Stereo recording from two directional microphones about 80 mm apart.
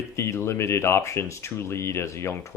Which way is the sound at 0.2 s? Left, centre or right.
Left.